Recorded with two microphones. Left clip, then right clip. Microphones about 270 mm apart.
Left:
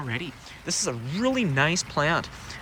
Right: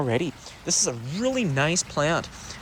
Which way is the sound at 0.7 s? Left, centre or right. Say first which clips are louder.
Right 3 dB; centre.